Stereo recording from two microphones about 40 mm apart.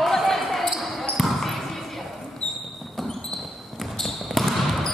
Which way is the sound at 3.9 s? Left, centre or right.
Centre.